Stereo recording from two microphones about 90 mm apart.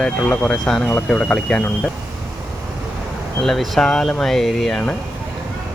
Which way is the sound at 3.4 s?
5° left (ahead or behind).